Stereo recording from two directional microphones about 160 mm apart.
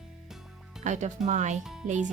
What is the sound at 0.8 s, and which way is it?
Speech, 50° right (ahead or behind).